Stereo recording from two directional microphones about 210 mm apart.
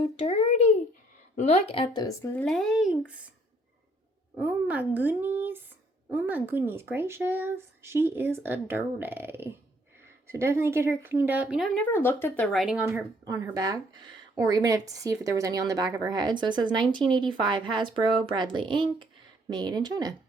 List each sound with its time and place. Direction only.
0.2 s a sound: 30° left (ahead or behind)
1.4 s speech: 30° left (ahead or behind); by 3.0 s centre (ahead or behind)
4.4 s a woman's voice: 10° right (ahead or behind)
13.2 s a woman's voice: 15° right (ahead or behind)